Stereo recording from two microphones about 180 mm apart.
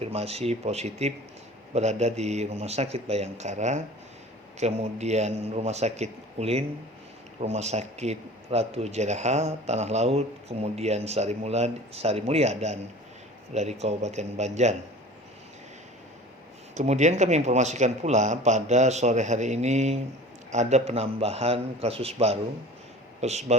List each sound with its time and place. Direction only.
0.0 s speech: 35° right (ahead or behind)
16.7 s speech: 40° right (ahead or behind)